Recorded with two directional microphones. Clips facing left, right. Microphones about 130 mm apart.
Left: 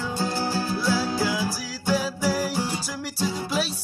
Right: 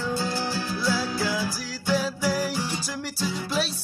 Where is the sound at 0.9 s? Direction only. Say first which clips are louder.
Left 2 dB; 5° left (ahead or behind).